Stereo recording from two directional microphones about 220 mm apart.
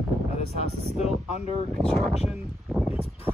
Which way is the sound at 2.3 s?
5° right (ahead or behind).